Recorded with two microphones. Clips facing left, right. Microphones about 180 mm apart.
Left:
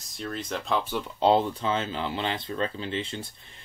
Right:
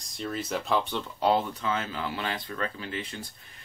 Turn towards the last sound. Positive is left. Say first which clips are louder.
# left 4 dB
turn(degrees=25)  # may be behind; listen again after turning